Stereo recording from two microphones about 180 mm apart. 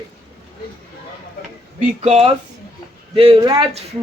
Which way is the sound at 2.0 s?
35° right (ahead or behind).